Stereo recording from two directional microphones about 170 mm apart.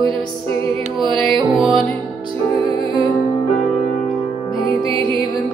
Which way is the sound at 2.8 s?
30° right (ahead or behind).